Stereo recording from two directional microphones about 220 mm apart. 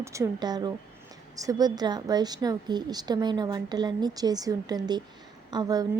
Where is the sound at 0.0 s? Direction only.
15° right (ahead or behind).